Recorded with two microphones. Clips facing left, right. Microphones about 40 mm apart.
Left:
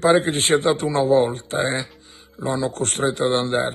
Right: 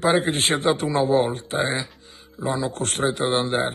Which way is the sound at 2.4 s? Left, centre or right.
Left.